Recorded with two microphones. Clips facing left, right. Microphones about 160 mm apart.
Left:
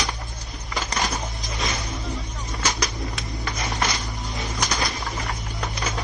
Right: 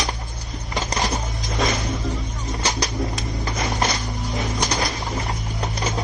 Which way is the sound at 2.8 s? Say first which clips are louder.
Right 4 dB; 30° right (ahead or behind).